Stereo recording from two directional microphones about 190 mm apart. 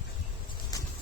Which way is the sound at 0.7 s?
20° left (ahead or behind).